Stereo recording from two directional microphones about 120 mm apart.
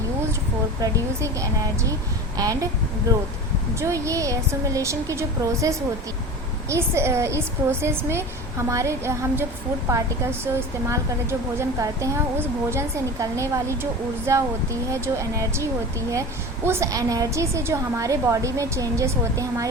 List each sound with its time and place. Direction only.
0.8 s a woman's voice: 25° right (ahead or behind)
3.8 s a woman's voice: 25° right (ahead or behind)